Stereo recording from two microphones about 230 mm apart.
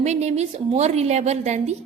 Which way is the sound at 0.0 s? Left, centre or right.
Right.